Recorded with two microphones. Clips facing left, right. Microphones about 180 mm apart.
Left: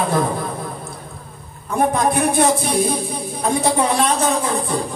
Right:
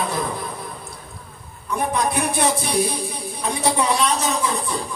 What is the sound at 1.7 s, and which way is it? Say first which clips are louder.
Speech: left 5 dB; 50° left (ahead or behind).